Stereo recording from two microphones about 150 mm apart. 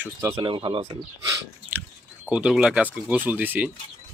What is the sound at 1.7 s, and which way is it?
Chewing, 10° right (ahead or behind).